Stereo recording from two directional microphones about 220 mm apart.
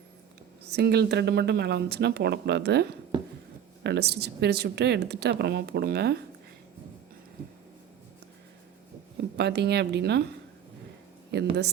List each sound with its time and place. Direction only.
0.6 s speech: 50° right (ahead or behind)
3.1 s a sound: 20° right (ahead or behind)
3.8 s speech: 50° right (ahead or behind)
9.4 s speech: 50° right (ahead or behind)
11.3 s speech: 50° right (ahead or behind)